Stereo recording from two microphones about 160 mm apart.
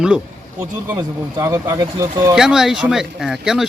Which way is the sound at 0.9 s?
15° right (ahead or behind).